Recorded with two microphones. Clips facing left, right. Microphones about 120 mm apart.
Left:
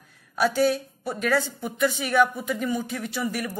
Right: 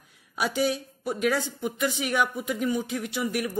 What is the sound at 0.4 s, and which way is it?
A woman's voice, 15° right (ahead or behind).